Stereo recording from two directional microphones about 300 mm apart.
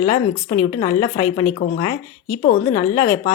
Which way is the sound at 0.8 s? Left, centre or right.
Centre.